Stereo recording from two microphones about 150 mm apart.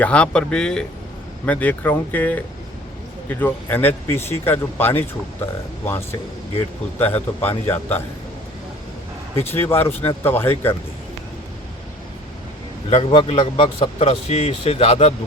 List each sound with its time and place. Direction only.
0.0 s speech: 5° left (ahead or behind)
9.5 s speech: 15° left (ahead or behind)
12.9 s speech: 40° left (ahead or behind)